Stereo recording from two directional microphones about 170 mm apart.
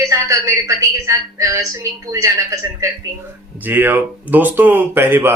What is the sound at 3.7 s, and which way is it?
A woman's voice, 10° right (ahead or behind).